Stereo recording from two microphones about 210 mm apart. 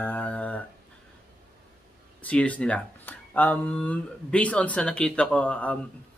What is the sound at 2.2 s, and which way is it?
Speech, 5° left (ahead or behind).